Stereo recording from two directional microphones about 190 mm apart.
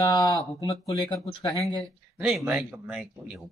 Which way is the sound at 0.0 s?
20° left (ahead or behind).